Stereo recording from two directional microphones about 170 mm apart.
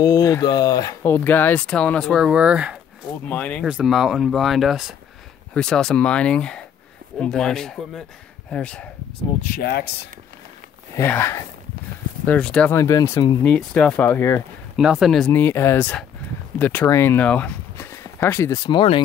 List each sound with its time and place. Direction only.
0.0 s speech: 20° left (ahead or behind); by 2.8 s 5° right (ahead or behind)
3.3 s speech: 10° left (ahead or behind)
3.6 s speech: 5° right (ahead or behind)
9.6 s speech: 65° left (ahead or behind)
11.0 s speech: 15° left (ahead or behind)
12.7 s speech: 20° left (ahead or behind)
13.4 s speech: 5° left (ahead or behind)
14.8 s speech: 5° right (ahead or behind)
15.3 s speech: 15° left (ahead or behind); by 19.0 s 30° left (ahead or behind)